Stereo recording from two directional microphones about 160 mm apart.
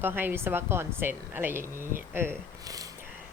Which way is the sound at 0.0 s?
10° right (ahead or behind).